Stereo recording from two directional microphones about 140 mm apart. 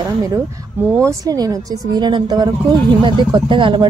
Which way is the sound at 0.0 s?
25° right (ahead or behind).